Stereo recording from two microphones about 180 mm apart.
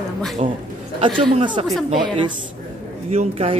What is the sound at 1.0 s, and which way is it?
Speech, 30° right (ahead or behind).